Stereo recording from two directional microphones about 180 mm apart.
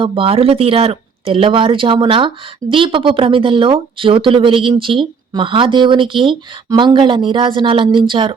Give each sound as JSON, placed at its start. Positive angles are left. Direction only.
{"t": 0.0, "sound": "speech", "side_deg": -30}